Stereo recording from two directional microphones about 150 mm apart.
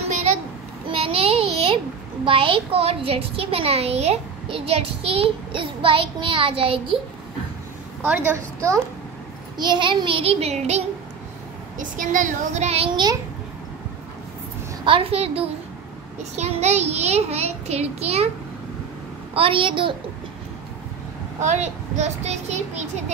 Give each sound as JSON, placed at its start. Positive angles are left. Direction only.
{"t": 0.8, "sound": "a sound", "side_deg": -40}
{"t": 2.2, "sound": "a child's voice", "side_deg": -35}
{"t": 8.0, "sound": "a woman's voice", "side_deg": -15}
{"t": 9.6, "sound": "a child's voice", "side_deg": -30}
{"t": 11.8, "sound": "a child's voice", "side_deg": -60}
{"t": 14.9, "sound": "a child's voice", "side_deg": -40}
{"t": 19.3, "sound": "a child's voice", "side_deg": -35}
{"t": 21.4, "sound": "a child's voice", "side_deg": -50}